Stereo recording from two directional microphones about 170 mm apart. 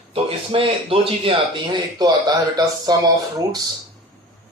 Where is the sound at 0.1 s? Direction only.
35° right (ahead or behind).